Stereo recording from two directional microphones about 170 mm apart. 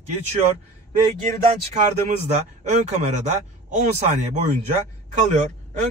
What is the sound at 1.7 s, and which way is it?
Speech, 45° right (ahead or behind).